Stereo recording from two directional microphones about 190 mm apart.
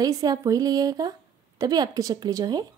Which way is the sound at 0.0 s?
20° right (ahead or behind).